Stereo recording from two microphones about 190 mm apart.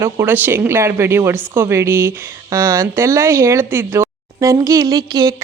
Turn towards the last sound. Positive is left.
turn(degrees=-20)  # may be behind; listen again after turning